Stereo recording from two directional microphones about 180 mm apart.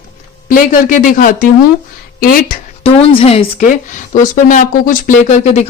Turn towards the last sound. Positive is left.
turn(degrees=40)  # may be behind; listen again after turning